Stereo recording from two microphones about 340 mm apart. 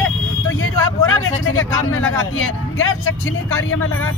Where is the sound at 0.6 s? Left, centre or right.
Left.